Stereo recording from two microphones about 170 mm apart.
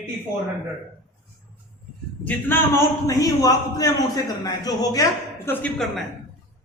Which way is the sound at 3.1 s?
20° left (ahead or behind).